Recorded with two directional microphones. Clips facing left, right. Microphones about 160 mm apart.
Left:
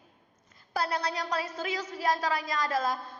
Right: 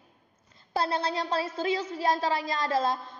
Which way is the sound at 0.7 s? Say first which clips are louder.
Right 3 dB; 25° right (ahead or behind).